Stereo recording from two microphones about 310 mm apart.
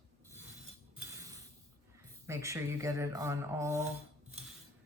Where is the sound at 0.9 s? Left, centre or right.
Centre.